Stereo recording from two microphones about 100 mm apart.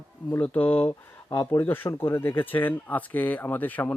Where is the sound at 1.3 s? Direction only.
45° left (ahead or behind).